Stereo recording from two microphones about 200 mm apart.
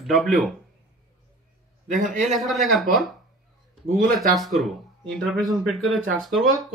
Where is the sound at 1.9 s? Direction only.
40° right (ahead or behind).